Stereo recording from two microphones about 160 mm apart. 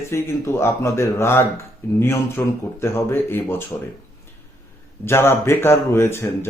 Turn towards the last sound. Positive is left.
turn(degrees=15)  # may be behind; listen again after turning